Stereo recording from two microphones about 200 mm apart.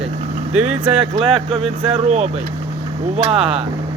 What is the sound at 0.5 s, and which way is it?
Speech, 5° right (ahead or behind).